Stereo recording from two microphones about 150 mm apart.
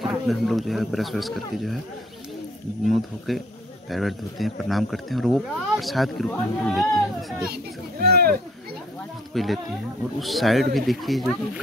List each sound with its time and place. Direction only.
0.0 s speech: centre (ahead or behind)
3.3 s speech: centre (ahead or behind)
7.4 s a child's voice: 90° right
9.3 s speech: centre (ahead or behind)